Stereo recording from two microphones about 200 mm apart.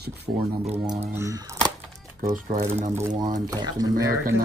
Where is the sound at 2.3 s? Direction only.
35° right (ahead or behind).